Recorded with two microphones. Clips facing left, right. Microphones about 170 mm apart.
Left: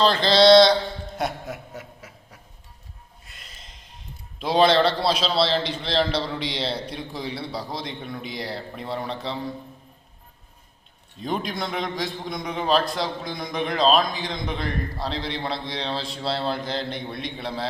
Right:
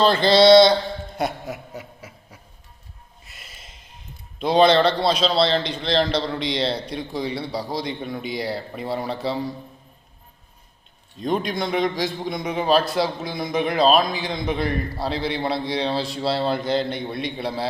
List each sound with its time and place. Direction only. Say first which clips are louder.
0.0 s a sound: right 2 dB; centre (ahead or behind)
3.2 s snort: right 3 dB; 10° right (ahead or behind)
4.4 s a man's voice: right 2 dB; centre (ahead or behind)
11.2 s a man's voice: right 4 dB; centre (ahead or behind)